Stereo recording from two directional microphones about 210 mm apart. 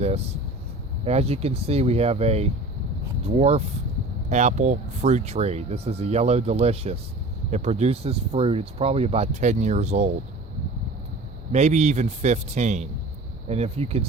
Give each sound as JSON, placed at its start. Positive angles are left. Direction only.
{"t": 1.0, "sound": "speech", "side_deg": -30}
{"t": 11.5, "sound": "speech", "side_deg": -35}